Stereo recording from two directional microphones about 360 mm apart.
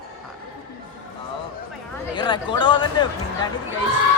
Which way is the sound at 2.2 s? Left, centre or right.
Centre.